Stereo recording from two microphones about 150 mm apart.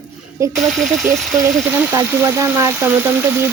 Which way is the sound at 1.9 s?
20° right (ahead or behind).